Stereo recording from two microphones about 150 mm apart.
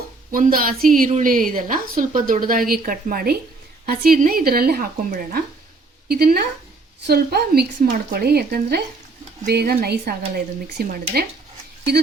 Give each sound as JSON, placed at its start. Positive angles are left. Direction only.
{"t": 0.3, "sound": "a woman's voice", "side_deg": -70}
{"t": 3.8, "sound": "speech", "side_deg": -90}